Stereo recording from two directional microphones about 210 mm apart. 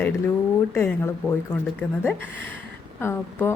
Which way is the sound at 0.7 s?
10° left (ahead or behind).